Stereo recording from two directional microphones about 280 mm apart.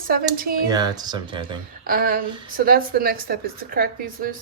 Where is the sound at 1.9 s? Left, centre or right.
Right.